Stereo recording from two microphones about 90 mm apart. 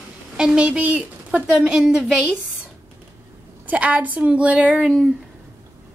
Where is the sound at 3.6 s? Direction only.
15° right (ahead or behind).